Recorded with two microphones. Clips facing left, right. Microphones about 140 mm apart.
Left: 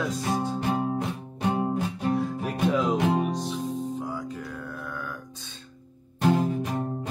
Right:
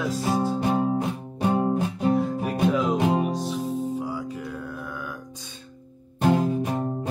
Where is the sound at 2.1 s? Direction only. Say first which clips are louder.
Right 3 dB; centre (ahead or behind).